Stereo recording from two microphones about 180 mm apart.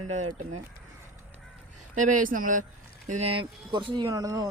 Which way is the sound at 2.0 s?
50° right (ahead or behind).